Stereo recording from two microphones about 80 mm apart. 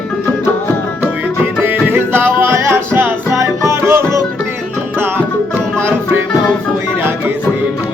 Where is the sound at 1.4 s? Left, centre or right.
Right.